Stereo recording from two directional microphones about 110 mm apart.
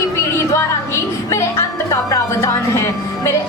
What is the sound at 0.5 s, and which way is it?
Music, 25° left (ahead or behind).